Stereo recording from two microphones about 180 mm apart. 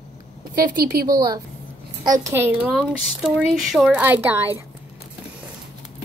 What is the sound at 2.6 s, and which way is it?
Speech, centre (ahead or behind).